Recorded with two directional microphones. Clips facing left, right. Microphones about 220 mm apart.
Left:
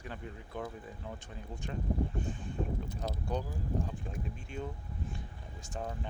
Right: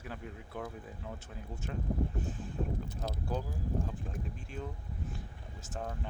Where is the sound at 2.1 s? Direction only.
5° right (ahead or behind).